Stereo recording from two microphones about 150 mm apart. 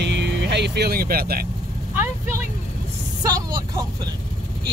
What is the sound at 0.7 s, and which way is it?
Speech, 85° right.